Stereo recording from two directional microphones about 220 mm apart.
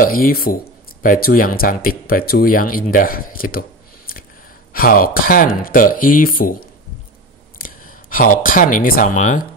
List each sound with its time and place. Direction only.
0.0 s speech: 40° left (ahead or behind)
4.7 s speech: 40° left (ahead or behind)
7.5 s a sound: 40° left (ahead or behind)
8.7 s speech: 40° left (ahead or behind)